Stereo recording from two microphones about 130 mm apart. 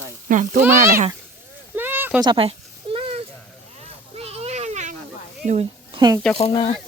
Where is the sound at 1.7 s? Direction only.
15° right (ahead or behind).